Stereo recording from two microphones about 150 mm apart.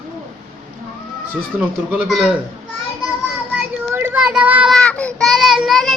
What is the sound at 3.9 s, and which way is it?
Child singing, 15° right (ahead or behind).